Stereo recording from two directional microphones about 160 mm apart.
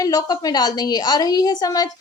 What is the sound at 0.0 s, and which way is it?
Speech, 20° left (ahead or behind).